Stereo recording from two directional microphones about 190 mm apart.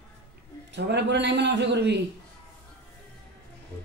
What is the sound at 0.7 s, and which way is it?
Speech, 65° right (ahead or behind).